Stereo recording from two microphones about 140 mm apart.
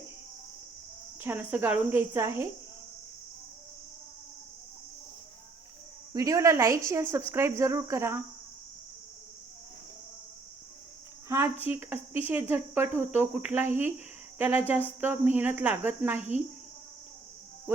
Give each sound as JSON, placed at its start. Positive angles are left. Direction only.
{"t": 1.2, "sound": "speech", "side_deg": -15}
{"t": 6.1, "sound": "speech", "side_deg": -25}
{"t": 11.3, "sound": "speech", "side_deg": -20}